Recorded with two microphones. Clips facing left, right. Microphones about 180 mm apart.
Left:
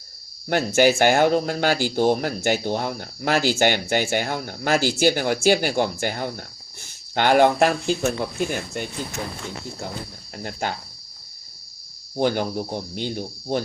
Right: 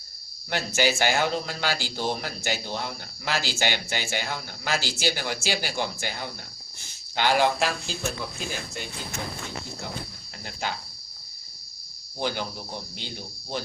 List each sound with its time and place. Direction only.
0.8 s speech: 50° left (ahead or behind)
10.3 s speech: 50° left (ahead or behind)
12.1 s speech: 50° left (ahead or behind)